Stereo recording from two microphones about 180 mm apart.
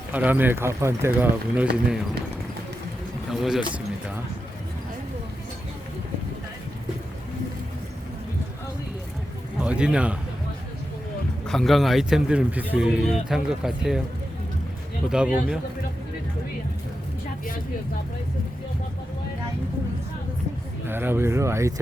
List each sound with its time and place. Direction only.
0.1 s speech: 10° right (ahead or behind)
3.2 s speech: centre (ahead or behind)
9.6 s a man's voice: 5° right (ahead or behind)
11.4 s speech: centre (ahead or behind)
15.1 s speech: 5° right (ahead or behind)
20.8 s speech: 10° right (ahead or behind)